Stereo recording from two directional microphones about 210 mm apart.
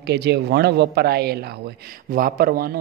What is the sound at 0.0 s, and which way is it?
Speech, 50° right (ahead or behind).